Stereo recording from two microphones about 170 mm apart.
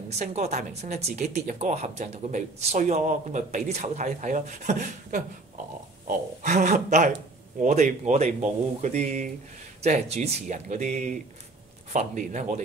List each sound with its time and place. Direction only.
0.1 s speech: 40° right (ahead or behind)